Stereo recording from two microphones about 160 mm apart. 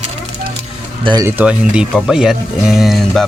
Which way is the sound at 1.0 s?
25° right (ahead or behind).